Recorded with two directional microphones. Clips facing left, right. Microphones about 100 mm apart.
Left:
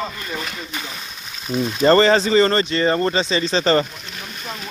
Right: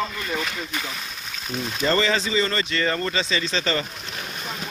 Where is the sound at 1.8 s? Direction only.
45° left (ahead or behind).